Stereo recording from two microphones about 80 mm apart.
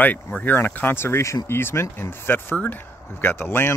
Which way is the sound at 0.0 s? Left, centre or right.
Centre.